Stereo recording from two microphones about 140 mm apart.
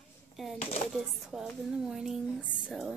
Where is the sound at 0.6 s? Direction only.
45° left (ahead or behind).